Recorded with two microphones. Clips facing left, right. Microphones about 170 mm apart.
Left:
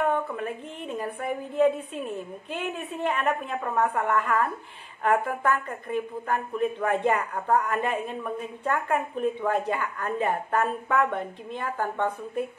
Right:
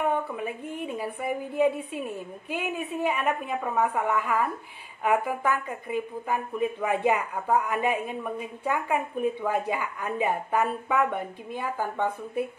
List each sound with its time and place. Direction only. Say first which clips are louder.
0.1 s a woman's voice: left 1 dB; 10° right (ahead or behind)